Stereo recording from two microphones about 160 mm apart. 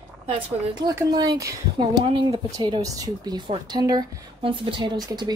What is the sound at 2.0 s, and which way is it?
Speech, 35° right (ahead or behind).